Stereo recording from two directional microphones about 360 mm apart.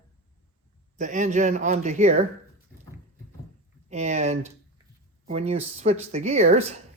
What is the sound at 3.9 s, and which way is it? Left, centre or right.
Speech, centre.